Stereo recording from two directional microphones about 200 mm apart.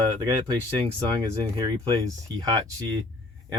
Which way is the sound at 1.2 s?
20° right (ahead or behind).